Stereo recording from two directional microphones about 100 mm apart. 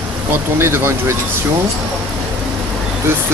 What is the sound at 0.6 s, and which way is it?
Speech, 25° right (ahead or behind).